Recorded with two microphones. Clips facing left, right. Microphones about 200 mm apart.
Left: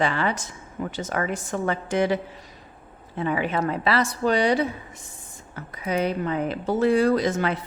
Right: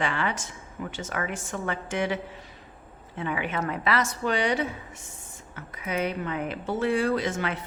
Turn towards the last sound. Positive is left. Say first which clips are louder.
# left 5 dB
turn(degrees=35)  # may be behind; listen again after turning